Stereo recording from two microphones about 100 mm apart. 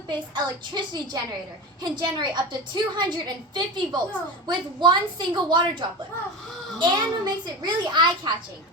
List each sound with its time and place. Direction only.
0.1 s a woman's voice: 45° right (ahead or behind)